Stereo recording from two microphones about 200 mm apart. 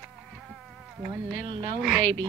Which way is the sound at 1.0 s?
20° right (ahead or behind).